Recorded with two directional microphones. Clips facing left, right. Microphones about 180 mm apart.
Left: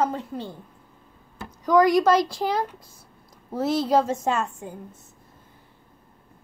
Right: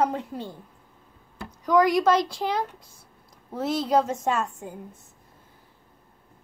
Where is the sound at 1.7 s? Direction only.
Centre (ahead or behind).